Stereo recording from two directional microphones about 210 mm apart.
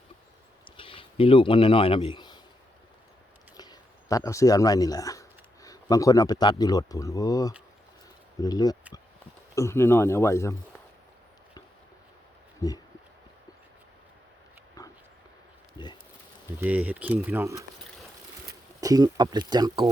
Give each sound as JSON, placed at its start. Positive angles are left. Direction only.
{"t": 0.8, "sound": "speech", "side_deg": 25}
{"t": 3.6, "sound": "speech", "side_deg": 15}
{"t": 12.6, "sound": "speech", "side_deg": 15}
{"t": 14.8, "sound": "dog", "side_deg": 15}
{"t": 16.6, "sound": "speech", "side_deg": -5}
{"t": 18.8, "sound": "speech", "side_deg": -15}